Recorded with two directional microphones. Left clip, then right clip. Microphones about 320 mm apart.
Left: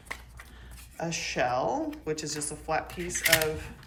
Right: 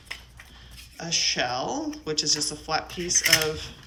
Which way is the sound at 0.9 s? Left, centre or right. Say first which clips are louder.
Right 5 dB; centre.